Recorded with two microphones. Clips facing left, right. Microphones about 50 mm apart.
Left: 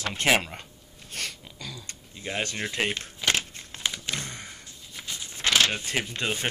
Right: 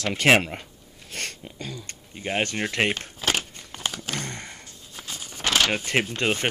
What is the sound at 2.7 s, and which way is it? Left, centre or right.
Speech, right.